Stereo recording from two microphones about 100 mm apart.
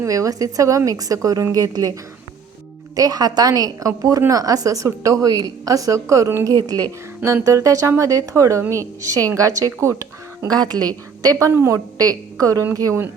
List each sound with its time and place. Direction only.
0.0 s a woman's voice: 35° right (ahead or behind)
2.9 s a woman's voice: 35° right (ahead or behind)
10.6 s a woman's voice: 45° right (ahead or behind)
11.3 s a woman's voice: 30° right (ahead or behind)